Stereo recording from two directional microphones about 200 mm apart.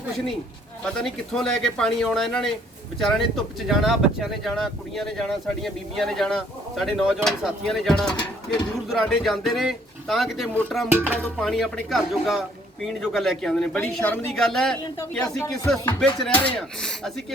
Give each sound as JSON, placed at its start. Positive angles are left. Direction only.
{"t": 0.9, "sound": "speech", "side_deg": 0}
{"t": 10.9, "sound": "music", "side_deg": -10}
{"t": 11.2, "sound": "speech", "side_deg": 5}